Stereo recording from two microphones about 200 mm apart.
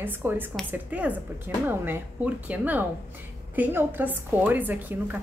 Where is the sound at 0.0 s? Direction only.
10° right (ahead or behind).